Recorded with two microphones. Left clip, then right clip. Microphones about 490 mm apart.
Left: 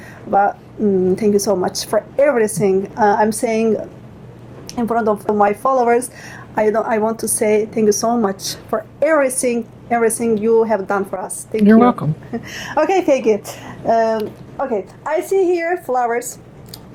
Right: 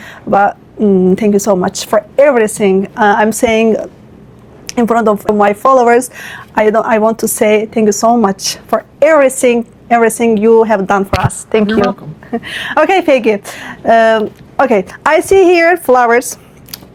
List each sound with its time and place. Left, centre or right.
0.0 s speech: right
12.3 s speech: right
14.6 s speech: right